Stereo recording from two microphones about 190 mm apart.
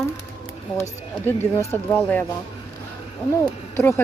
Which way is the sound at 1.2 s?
10° left (ahead or behind).